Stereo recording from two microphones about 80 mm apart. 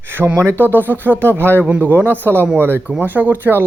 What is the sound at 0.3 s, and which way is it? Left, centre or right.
Speech, right.